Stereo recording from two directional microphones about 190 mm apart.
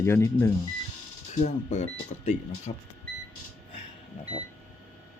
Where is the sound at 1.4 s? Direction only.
40° left (ahead or behind).